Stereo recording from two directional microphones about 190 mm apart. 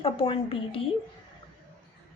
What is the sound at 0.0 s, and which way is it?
Speech, 30° left (ahead or behind).